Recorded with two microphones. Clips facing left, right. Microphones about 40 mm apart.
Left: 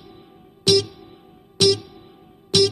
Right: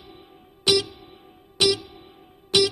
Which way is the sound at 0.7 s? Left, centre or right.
Centre.